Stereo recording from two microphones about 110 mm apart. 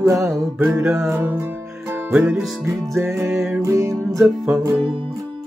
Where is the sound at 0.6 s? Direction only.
20° right (ahead or behind).